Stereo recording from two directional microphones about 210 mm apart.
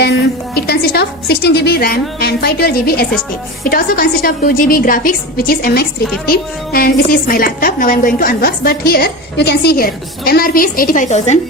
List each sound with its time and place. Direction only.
0.0 s a woman's voice: 50° left (ahead or behind); by 11.3 s 35° left (ahead or behind)